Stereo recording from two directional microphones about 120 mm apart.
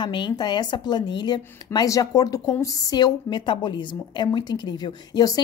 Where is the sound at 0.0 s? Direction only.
40° left (ahead or behind).